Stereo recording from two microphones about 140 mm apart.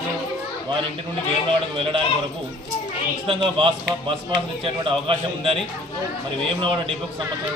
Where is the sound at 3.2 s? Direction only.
40° right (ahead or behind).